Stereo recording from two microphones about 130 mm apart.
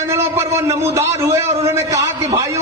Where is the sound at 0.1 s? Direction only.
20° right (ahead or behind).